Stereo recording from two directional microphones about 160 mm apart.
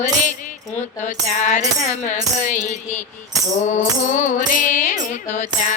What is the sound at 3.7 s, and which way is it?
Music, 50° left (ahead or behind).